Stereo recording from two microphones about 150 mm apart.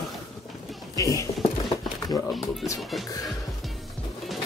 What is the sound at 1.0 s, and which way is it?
Speech, 20° left (ahead or behind).